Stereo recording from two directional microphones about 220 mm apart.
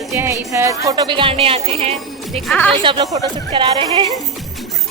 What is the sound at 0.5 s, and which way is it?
Speech, 15° right (ahead or behind).